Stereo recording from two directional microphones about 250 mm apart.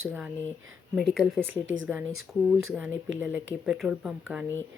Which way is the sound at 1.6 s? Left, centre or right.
Right.